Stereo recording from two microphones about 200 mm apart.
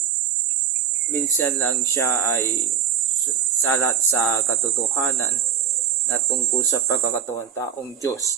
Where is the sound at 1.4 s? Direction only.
10° left (ahead or behind).